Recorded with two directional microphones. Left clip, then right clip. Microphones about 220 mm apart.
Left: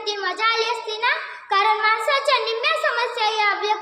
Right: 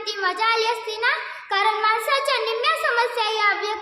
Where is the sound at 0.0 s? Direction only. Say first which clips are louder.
Even; 10° right (ahead or behind).